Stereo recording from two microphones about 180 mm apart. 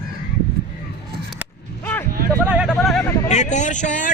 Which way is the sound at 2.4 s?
5° right (ahead or behind).